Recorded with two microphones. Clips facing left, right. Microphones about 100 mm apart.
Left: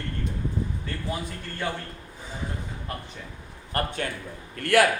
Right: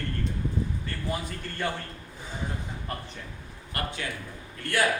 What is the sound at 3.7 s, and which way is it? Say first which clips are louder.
Speech: left 5 dB; 40° left (ahead or behind).